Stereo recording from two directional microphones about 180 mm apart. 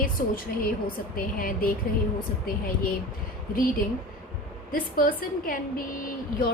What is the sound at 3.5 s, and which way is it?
A woman's voice, 55° left (ahead or behind).